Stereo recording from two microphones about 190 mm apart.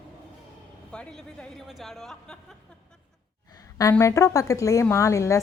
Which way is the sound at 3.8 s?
15° left (ahead or behind).